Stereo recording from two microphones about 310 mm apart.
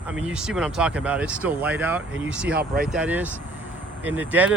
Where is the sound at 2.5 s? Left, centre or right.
Right.